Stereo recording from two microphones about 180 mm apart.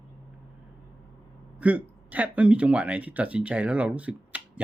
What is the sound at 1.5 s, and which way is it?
Speech, 10° right (ahead or behind).